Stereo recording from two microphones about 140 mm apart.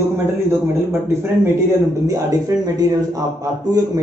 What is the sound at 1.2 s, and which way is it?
Speech, 20° right (ahead or behind).